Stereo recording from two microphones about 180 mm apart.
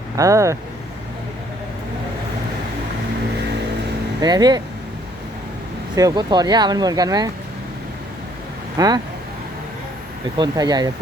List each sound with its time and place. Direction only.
0.2 s speech: 15° right (ahead or behind)
4.2 s speech: 25° right (ahead or behind)
6.0 s speech: 20° right (ahead or behind)
8.8 s speech: 20° right (ahead or behind)
10.3 s speech: 25° right (ahead or behind)